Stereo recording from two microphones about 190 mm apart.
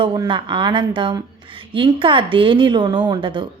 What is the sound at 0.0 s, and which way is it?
A woman's voice, 25° right (ahead or behind).